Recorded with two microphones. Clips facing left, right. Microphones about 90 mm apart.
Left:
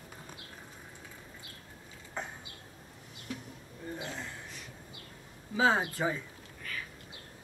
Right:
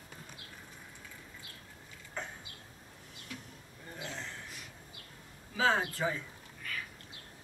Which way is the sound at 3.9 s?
10° left (ahead or behind).